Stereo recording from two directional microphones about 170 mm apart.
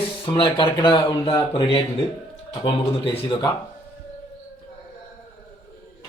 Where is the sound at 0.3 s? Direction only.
30° left (ahead or behind).